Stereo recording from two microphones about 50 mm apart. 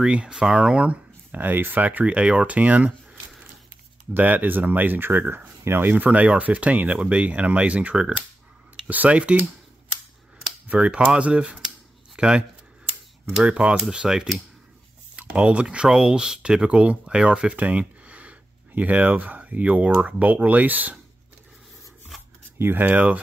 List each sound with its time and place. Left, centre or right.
0.0 s speech: centre
1.4 s speech: right
2.0 s speech: right
4.2 s speech: right
5.6 s speech: right
10.7 s speech: right
16.6 s speech: right
17.6 s a sound: right
18.8 s speech: right
22.6 s speech: right
22.8 s speech: right